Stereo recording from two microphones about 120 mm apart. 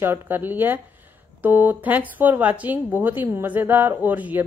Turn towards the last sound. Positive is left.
turn(degrees=-15)  # may be behind; listen again after turning